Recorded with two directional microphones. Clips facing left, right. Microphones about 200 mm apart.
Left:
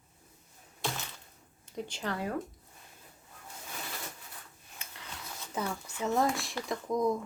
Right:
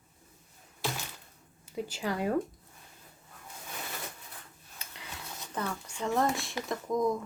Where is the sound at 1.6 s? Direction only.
5° right (ahead or behind).